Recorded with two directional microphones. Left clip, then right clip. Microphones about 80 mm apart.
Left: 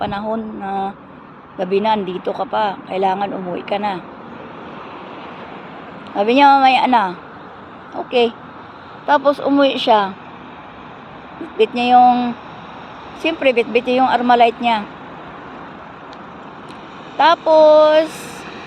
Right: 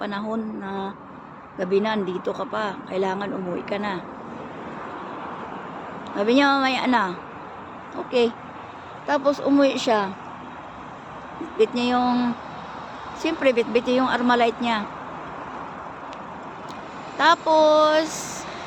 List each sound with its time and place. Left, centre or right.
0.0 s speech: centre
6.1 s speech: centre
9.0 s speech: centre
11.5 s speech: centre
11.9 s speech: centre
17.2 s speech: centre